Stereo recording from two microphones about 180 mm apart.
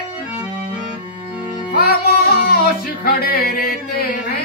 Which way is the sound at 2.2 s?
60° left (ahead or behind).